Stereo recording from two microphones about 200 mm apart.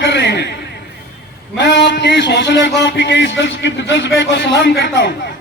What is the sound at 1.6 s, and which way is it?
A man's voice, 60° left (ahead or behind).